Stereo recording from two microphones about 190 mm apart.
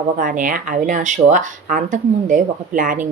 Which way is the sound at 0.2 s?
45° right (ahead or behind).